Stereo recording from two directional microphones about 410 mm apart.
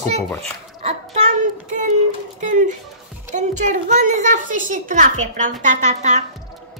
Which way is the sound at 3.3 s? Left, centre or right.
Centre.